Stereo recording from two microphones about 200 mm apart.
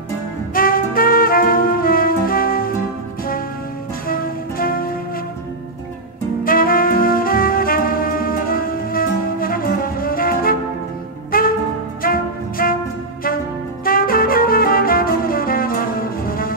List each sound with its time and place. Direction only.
0.6 s music: 45° left (ahead or behind)
4.1 s music: 45° left (ahead or behind)
6.4 s music: 45° left (ahead or behind)
13.8 s music: 45° left (ahead or behind)